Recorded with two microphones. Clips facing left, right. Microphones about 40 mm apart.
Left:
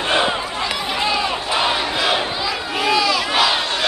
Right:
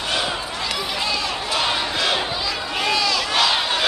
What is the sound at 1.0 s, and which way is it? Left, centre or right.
Crowd, centre.